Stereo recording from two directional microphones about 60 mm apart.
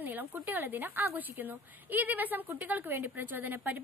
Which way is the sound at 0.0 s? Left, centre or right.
Right.